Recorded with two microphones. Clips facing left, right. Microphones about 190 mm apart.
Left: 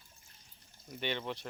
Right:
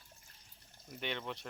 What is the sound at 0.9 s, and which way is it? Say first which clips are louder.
Speech: left 3 dB; centre (ahead or behind).